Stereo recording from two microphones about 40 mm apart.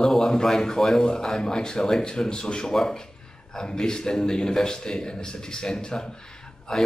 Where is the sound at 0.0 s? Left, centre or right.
Centre.